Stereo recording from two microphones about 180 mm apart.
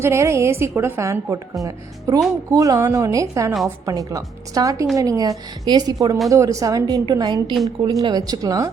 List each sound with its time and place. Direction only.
0.0 s a woman's voice: 15° right (ahead or behind)